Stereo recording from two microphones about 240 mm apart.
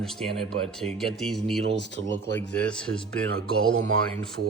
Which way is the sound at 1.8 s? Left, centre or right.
Left.